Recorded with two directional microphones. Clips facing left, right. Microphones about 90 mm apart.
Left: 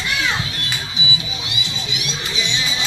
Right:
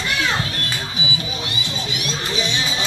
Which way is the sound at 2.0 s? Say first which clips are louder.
Right 3 dB; 45° right (ahead or behind).